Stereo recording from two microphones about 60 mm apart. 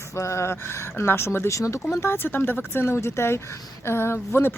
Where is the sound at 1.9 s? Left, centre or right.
Left.